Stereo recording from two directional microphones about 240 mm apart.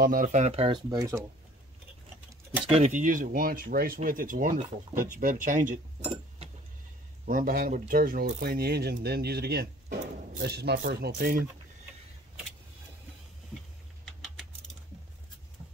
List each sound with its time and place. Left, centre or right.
0.0 s speech: right; by 1.2 s centre
2.7 s speech: right